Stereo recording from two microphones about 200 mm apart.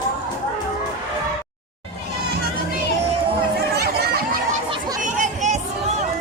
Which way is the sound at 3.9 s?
50° right (ahead or behind).